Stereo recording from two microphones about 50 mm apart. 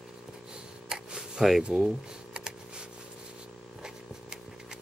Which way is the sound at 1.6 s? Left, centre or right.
Right.